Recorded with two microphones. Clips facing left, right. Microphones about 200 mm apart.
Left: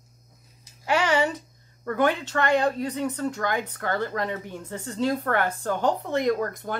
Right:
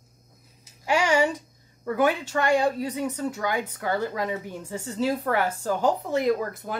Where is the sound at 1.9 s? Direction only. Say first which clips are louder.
Even; 10° right (ahead or behind).